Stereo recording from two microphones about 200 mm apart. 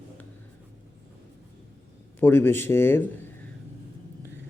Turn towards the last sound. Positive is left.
turn(degrees=10)  # may be behind; listen again after turning